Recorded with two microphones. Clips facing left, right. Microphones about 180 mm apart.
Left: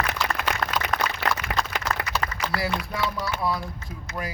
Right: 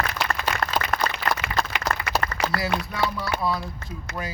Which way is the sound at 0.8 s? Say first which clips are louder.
Even; 70° left (ahead or behind).